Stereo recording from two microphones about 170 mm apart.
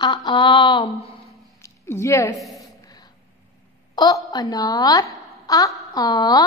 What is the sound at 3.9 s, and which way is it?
A woman's voice, 20° left (ahead or behind).